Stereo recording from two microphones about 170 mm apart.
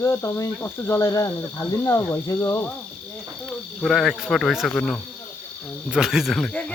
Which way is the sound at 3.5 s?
Centre (ahead or behind).